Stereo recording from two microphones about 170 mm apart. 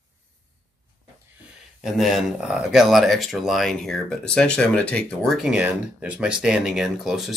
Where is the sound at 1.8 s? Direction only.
Centre (ahead or behind).